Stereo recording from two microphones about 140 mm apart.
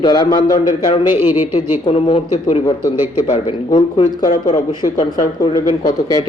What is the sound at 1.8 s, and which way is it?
Speech, 45° left (ahead or behind).